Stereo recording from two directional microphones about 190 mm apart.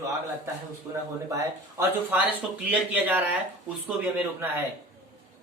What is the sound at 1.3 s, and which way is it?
Speech, 15° right (ahead or behind).